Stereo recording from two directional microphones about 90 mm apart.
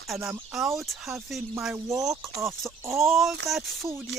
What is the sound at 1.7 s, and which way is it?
Speech, 35° right (ahead or behind).